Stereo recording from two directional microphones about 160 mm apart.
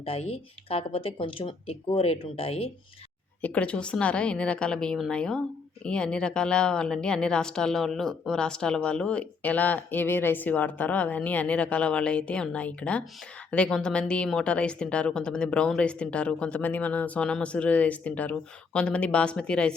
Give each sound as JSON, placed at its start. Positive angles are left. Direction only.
{"t": 0.0, "sound": "speech", "side_deg": 35}
{"t": 3.4, "sound": "speech", "side_deg": 10}